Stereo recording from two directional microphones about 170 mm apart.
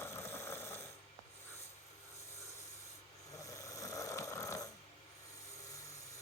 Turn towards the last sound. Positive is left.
turn(degrees=20)  # may be behind; listen again after turning